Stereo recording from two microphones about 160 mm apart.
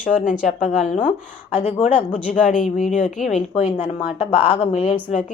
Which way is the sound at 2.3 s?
55° left (ahead or behind).